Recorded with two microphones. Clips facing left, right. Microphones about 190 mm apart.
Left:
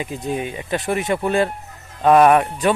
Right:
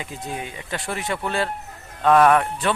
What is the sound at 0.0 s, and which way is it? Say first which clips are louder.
A man's voice: left 7 dB; 20° left (ahead or behind).